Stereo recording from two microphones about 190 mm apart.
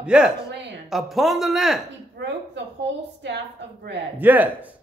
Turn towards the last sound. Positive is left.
turn(degrees=-10)  # may be behind; listen again after turning